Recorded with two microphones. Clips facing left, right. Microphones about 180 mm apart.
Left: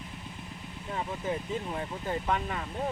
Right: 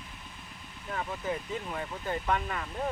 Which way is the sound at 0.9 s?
20° left (ahead or behind).